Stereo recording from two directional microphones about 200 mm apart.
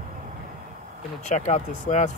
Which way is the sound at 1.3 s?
35° left (ahead or behind).